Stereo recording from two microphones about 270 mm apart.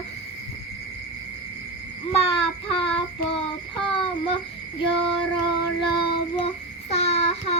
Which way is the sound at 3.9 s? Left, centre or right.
Centre.